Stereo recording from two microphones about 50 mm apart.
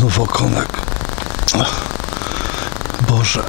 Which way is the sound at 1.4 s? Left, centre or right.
Centre.